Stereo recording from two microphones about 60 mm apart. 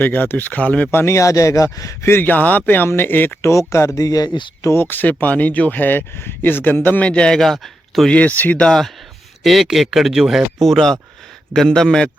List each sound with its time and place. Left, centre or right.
0.0 s speech: left
0.9 s speech: left
1.1 s speech: left
2.0 s speech: left
3.5 s speech: left
4.7 s speech: left
7.0 s speech: centre
7.4 s speech: centre
8.1 s speech: left
8.5 s speech: centre
9.4 s speech: centre